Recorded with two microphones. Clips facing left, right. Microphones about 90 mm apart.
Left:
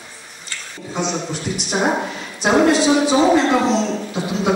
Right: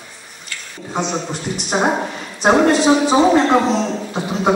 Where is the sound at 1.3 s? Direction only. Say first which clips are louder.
Right 2 dB; 40° right (ahead or behind).